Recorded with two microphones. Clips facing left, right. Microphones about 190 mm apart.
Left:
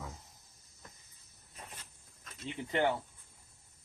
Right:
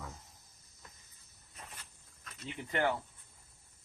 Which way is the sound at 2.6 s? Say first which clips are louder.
Left 2 dB; 25° left (ahead or behind).